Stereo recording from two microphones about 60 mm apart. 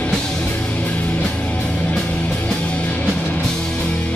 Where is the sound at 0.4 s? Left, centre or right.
Left.